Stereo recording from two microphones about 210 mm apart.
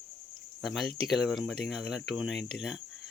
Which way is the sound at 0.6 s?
Centre (ahead or behind).